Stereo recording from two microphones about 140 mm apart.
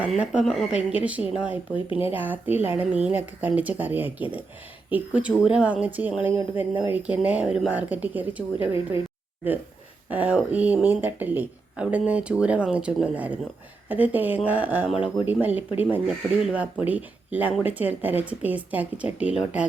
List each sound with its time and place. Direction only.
0.0 s speech: 5° right (ahead or behind)
1.9 s speech: 40° left (ahead or behind)
2.1 s speech: 15° right (ahead or behind)
10.1 s speech: 10° right (ahead or behind)